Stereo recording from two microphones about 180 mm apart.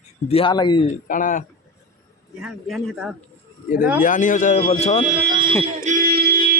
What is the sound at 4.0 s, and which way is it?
Speech, 45° left (ahead or behind).